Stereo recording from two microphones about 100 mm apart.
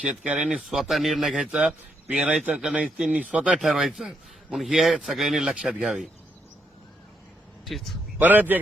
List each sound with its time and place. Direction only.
0.0 s speech: 10° right (ahead or behind)
3.6 s speech: centre (ahead or behind)
7.6 s a man's voice: centre (ahead or behind)
8.2 s speech: 20° right (ahead or behind)